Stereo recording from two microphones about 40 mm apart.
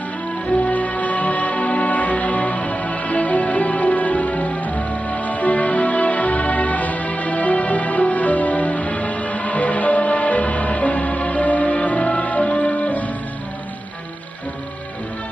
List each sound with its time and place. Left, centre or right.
0.7 s music: left